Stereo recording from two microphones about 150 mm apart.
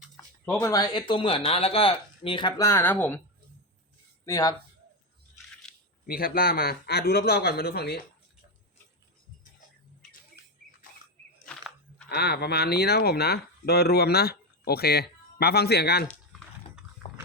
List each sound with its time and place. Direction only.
0.6 s speech: 25° left (ahead or behind)
2.6 s speech: 15° left (ahead or behind)
4.3 s speech: 20° left (ahead or behind)
6.1 s speech: 80° left
11.4 s a sound: 5° left (ahead or behind)
12.0 s speech: 90° left
17.0 s pig: 40° left (ahead or behind)